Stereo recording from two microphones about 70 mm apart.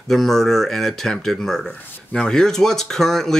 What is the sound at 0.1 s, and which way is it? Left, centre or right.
Speech, centre.